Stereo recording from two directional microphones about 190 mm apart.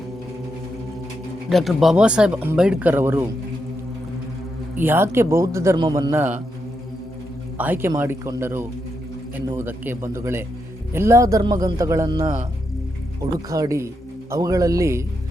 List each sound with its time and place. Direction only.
1.5 s speech: centre (ahead or behind)
4.8 s a man's voice: 10° right (ahead or behind)
7.6 s a man's voice: 10° right (ahead or behind)
13.5 s a man's voice: 15° right (ahead or behind)